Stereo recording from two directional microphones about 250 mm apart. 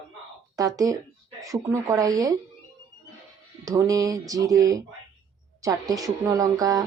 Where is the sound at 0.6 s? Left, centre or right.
Centre.